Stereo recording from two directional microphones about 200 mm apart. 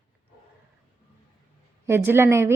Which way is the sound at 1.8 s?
10° right (ahead or behind).